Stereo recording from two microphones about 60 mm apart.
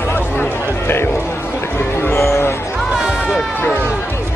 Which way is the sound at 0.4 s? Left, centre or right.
Left.